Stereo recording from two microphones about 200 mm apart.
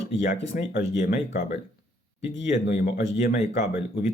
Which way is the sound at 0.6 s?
60° left (ahead or behind).